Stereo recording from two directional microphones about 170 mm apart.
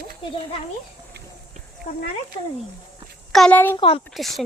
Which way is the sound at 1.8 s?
55° left (ahead or behind).